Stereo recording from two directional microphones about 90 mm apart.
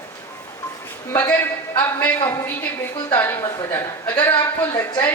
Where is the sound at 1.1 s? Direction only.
20° left (ahead or behind).